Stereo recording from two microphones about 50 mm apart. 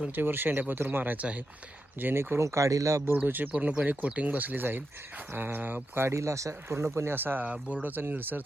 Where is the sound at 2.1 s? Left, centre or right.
Right.